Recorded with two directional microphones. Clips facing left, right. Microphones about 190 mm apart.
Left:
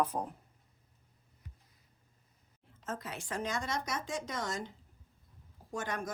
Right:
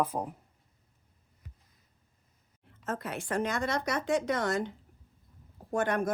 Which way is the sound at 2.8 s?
60° right (ahead or behind).